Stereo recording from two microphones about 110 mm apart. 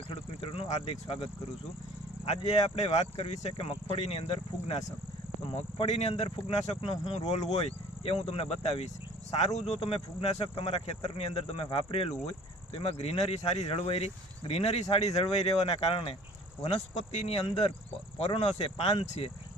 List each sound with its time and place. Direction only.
0.1 s speech: 60° left (ahead or behind)
2.2 s speech: 70° left (ahead or behind)
3.8 s speech: 65° left (ahead or behind)
5.5 s speech: 80° left; by 16.1 s 60° left (ahead or behind)
16.6 s speech: 75° left (ahead or behind)